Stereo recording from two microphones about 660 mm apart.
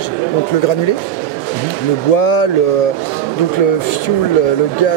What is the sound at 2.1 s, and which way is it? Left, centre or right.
Speech, left.